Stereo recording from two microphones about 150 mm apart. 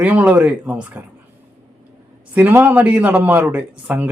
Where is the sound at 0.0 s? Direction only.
10° right (ahead or behind).